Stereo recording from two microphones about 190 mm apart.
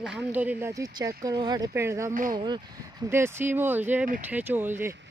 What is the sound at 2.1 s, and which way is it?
Speech, 45° right (ahead or behind).